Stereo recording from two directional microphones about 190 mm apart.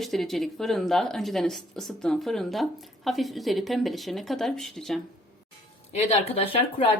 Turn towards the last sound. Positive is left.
turn(degrees=30)  # may be behind; listen again after turning